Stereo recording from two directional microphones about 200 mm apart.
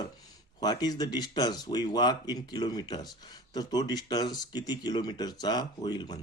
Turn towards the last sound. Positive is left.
turn(degrees=20)  # may be behind; listen again after turning